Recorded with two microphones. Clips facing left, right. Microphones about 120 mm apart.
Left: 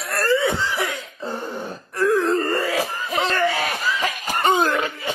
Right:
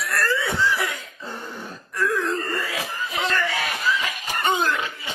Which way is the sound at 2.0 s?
35° left (ahead or behind).